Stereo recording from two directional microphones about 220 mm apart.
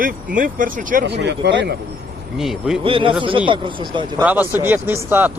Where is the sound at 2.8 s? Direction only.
25° right (ahead or behind).